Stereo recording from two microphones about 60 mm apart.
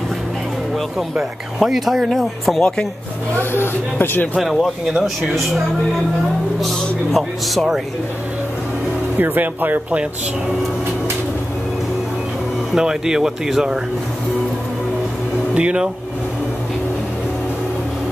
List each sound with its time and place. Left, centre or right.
0.9 s speech: centre
3.3 s speech: left
4.4 s speech: centre
6.6 s speech: centre
9.2 s speech: right
12.7 s speech: centre
15.5 s speech: centre